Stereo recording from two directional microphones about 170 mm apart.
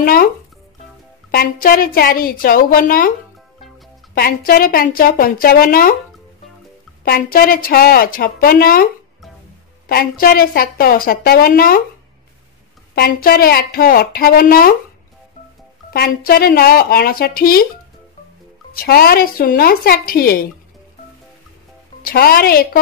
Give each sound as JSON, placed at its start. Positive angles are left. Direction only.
{"t": 0.0, "sound": "a woman's voice", "side_deg": 60}
{"t": 1.3, "sound": "a woman's voice", "side_deg": 60}
{"t": 4.1, "sound": "a woman's voice", "side_deg": 60}
{"t": 7.1, "sound": "a woman's voice", "side_deg": 60}
{"t": 9.8, "sound": "a woman's voice", "side_deg": 60}
{"t": 12.9, "sound": "a woman's voice", "side_deg": 65}
{"t": 15.9, "sound": "a woman's voice", "side_deg": 65}
{"t": 18.7, "sound": "a woman's voice", "side_deg": 60}
{"t": 22.0, "sound": "a woman's voice", "side_deg": 65}